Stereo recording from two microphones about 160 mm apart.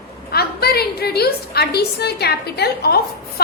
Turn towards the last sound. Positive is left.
turn(degrees=80)